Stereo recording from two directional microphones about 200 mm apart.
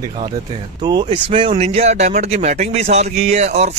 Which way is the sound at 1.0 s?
25° right (ahead or behind).